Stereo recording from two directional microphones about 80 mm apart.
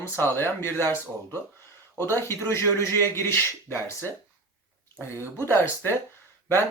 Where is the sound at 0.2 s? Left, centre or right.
Left.